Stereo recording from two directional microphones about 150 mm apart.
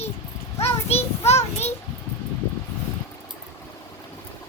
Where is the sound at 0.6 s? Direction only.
45° left (ahead or behind).